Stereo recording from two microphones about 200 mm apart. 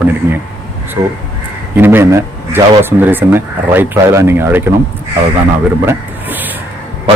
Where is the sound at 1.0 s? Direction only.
20° right (ahead or behind).